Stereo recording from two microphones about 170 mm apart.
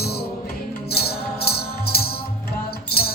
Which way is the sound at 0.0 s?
70° left (ahead or behind).